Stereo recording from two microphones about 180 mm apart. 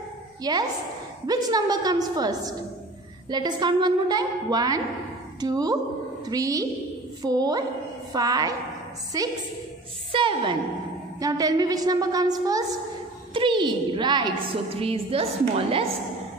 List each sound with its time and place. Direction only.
0.4 s a woman's voice: 20° right (ahead or behind)